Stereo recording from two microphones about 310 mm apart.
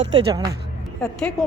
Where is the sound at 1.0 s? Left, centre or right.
Centre.